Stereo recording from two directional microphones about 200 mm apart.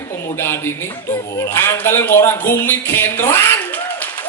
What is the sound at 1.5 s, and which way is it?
Speech, 10° left (ahead or behind).